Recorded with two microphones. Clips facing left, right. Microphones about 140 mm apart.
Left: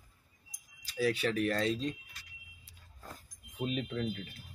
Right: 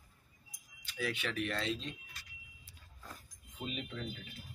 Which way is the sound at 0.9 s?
35° left (ahead or behind).